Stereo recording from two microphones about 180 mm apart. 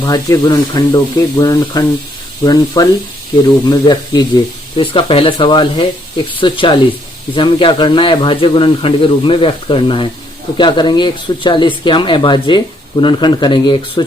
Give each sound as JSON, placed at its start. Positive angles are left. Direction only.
{"t": 0.0, "sound": "speech", "side_deg": 20}